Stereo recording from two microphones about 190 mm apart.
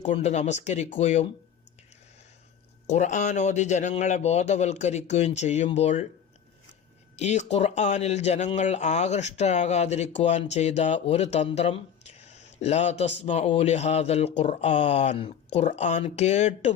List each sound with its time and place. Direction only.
0.0 s speech: 35° left (ahead or behind)
2.8 s speech: 40° left (ahead or behind)
7.2 s speech: 35° left (ahead or behind)